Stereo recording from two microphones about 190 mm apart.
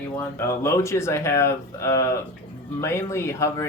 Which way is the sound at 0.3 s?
15° left (ahead or behind).